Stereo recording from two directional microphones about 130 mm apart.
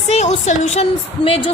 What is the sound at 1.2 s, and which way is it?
Speech, 45° left (ahead or behind).